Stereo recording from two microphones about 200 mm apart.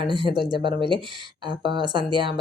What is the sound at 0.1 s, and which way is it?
Speech, 25° right (ahead or behind).